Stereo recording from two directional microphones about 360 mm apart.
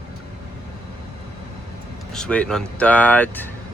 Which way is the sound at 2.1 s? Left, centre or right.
Centre.